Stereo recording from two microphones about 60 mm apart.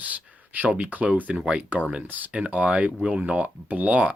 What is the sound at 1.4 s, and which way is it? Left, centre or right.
Speech, centre.